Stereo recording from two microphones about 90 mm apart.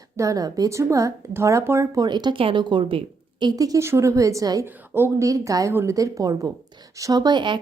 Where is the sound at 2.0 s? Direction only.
55° right (ahead or behind).